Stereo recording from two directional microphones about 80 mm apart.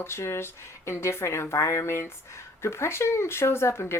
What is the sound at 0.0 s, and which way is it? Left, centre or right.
Speech, left.